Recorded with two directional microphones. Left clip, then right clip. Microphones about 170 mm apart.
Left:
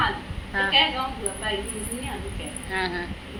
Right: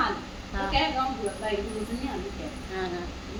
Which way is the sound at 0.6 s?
Centre (ahead or behind).